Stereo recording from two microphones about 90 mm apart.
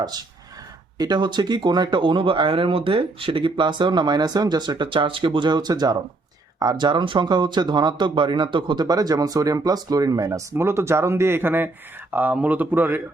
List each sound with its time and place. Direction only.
0.9 s speech: 50° right (ahead or behind)
10.5 s speech: 30° right (ahead or behind)